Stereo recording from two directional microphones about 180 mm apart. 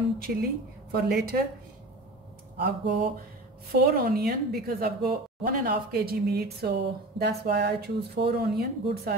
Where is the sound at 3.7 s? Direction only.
55° right (ahead or behind).